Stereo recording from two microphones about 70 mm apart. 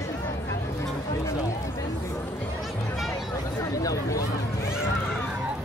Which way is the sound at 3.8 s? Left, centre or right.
Left.